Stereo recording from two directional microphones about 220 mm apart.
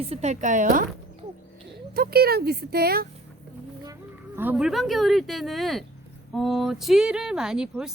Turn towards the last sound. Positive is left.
turn(degrees=-5)  # may be behind; listen again after turning